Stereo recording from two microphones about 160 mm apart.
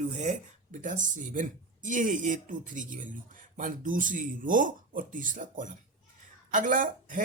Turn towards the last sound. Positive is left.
turn(degrees=-55)  # may be behind; listen again after turning